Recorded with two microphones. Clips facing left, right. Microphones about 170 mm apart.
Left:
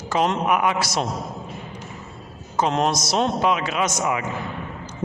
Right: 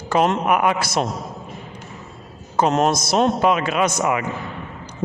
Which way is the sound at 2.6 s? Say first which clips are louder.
Right 3 dB; 45° right (ahead or behind).